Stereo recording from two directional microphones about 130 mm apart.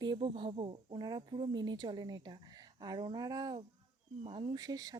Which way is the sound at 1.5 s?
30° right (ahead or behind).